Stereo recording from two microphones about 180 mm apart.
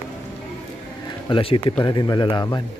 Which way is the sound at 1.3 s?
30° left (ahead or behind).